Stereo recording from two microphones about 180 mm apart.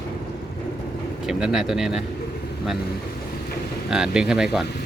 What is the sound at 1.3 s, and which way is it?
Speech, 5° right (ahead or behind).